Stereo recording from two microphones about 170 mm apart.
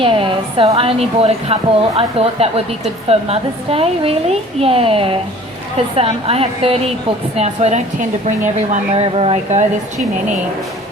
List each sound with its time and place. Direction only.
0.0 s a woman's voice: 30° right (ahead or behind)